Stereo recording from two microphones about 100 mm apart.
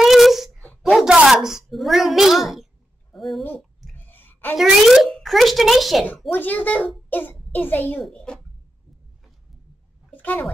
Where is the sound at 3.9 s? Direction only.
20° left (ahead or behind).